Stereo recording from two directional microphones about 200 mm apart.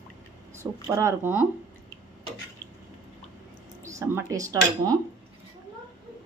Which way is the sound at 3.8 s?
15° right (ahead or behind).